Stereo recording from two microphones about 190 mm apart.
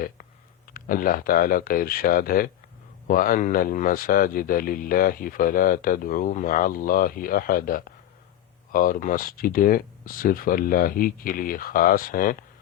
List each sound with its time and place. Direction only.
0.7 s speech: 50° left (ahead or behind)